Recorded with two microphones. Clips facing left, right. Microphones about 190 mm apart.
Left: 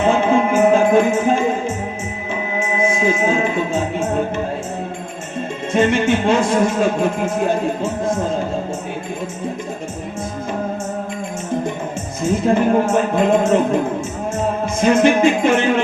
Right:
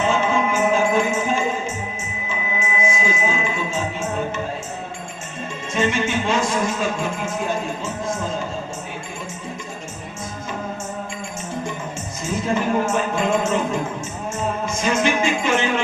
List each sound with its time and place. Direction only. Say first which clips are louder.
0.0 s music: left 5 dB; 55° left (ahead or behind)
5.7 s music: left 6 dB; 55° left (ahead or behind)
12.2 s music: left 7 dB; 55° left (ahead or behind)